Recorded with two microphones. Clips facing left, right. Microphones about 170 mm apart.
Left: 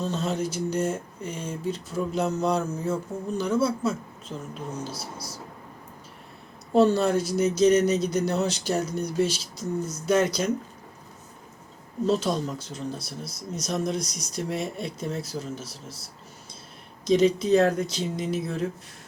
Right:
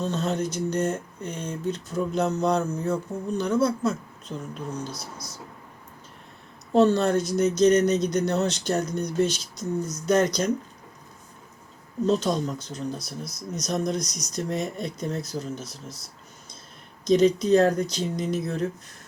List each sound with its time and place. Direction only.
0.1 s speech: 5° left (ahead or behind)
4.9 s speech: 30° left (ahead or behind)
6.7 s speech: 5° left (ahead or behind)
12.0 s speech: 5° left (ahead or behind)
17.1 s speech: 5° left (ahead or behind)